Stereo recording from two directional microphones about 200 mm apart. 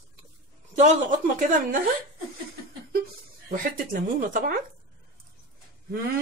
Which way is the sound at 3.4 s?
40° right (ahead or behind).